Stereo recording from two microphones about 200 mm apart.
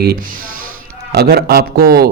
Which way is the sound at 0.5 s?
90° right.